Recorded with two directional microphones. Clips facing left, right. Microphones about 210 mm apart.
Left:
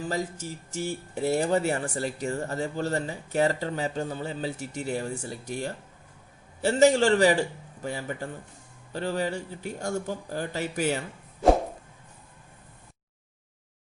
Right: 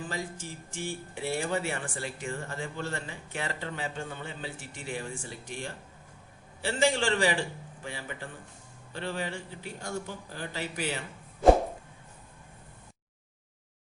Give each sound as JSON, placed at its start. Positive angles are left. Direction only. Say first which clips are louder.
{"t": 0.1, "sound": "speech", "louder": "left 6 dB", "side_deg": 40}